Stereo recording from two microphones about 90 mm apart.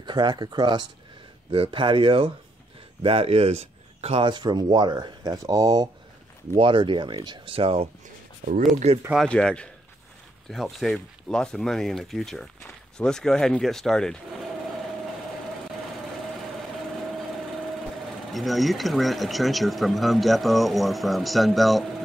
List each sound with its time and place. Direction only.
0.0 s speech: 55° right (ahead or behind)
1.5 s speech: 80° right
3.0 s speech: 90° right
4.1 s speech: 65° right (ahead or behind); by 5.9 s 45° right (ahead or behind)
6.6 s speech: 70° right (ahead or behind); by 7.9 s 90° right
9.3 s a man's voice: 10° left (ahead or behind)
10.5 s speech: centre (ahead or behind)
18.3 s speech: centre (ahead or behind)